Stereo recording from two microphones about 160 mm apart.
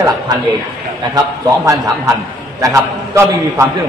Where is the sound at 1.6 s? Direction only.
20° right (ahead or behind).